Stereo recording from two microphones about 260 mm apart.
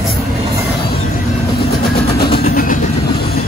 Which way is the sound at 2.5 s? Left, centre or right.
Left.